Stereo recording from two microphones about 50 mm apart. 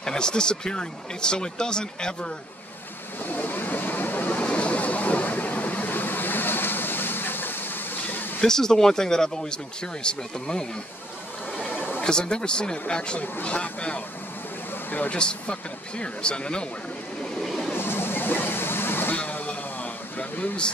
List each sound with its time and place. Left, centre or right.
0.0 s speech: centre
3.3 s a sound: left
8.4 s speech: centre
11.7 s a sound: left
12.0 s speech: centre
14.9 s speech: left
15.1 s speech: centre
17.4 s vehicle: centre
17.7 s waterfall: left
19.1 s vehicle: left